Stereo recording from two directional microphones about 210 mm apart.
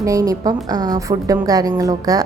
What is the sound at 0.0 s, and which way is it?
A woman's voice, 15° right (ahead or behind).